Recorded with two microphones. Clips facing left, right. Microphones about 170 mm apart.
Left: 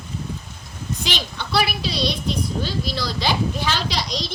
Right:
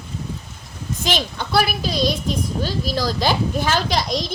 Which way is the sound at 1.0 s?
45° right (ahead or behind).